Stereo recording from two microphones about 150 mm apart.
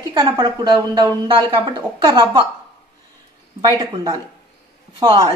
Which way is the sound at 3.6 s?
25° right (ahead or behind).